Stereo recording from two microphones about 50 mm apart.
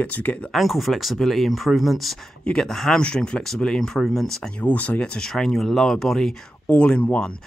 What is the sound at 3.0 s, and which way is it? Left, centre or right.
Speech, centre.